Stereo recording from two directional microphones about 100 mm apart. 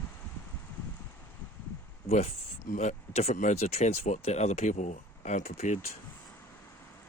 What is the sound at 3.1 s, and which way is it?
Speech, 90° left.